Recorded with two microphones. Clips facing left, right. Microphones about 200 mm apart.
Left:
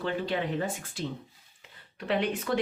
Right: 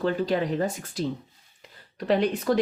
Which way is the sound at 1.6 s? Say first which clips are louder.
Right 7 dB; 40° right (ahead or behind).